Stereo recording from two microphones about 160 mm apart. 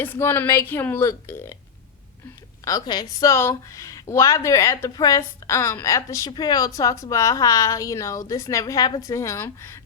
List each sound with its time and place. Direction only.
0.0 s a woman's voice: 15° left (ahead or behind)
2.6 s a woman's voice: 25° left (ahead or behind)